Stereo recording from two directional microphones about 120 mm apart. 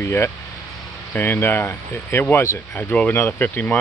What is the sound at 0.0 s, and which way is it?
Speech, 20° left (ahead or behind).